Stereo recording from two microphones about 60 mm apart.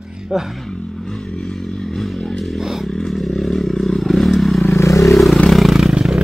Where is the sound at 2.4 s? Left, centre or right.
Centre.